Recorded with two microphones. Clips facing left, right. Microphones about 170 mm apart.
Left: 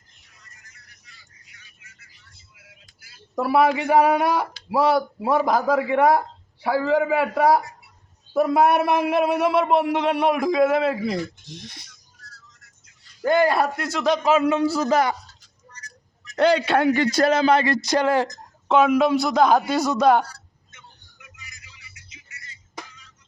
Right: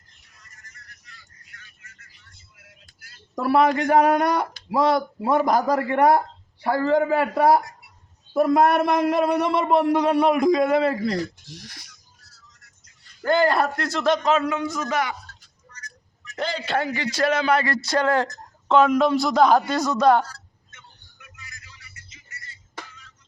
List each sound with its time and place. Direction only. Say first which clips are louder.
3.0 s a man's voice: left 1 dB; 5° left (ahead or behind)
11.4 s speech: left 3 dB; 20° left (ahead or behind)
11.9 s a sound: left 5 dB; 5° right (ahead or behind)
13.2 s a man's voice: left 1 dB; 10° left (ahead or behind)
14.3 s a man's voice: left 5 dB; 25° left (ahead or behind)
15.7 s a sound: right 1 dB; 35° left (ahead or behind)
16.4 s a man's voice: left 8 dB; 65° left (ahead or behind); by 17.3 s 45° left (ahead or behind)
17.5 s speech: left 2 dB; 20° left (ahead or behind)
20.7 s a sound: left 3 dB; 15° left (ahead or behind)